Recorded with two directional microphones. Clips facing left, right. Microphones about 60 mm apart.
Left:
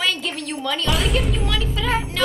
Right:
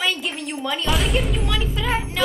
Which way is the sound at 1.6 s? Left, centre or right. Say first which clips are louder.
Left 1 dB; centre.